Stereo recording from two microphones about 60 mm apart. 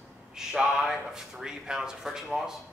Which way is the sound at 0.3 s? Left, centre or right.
Centre.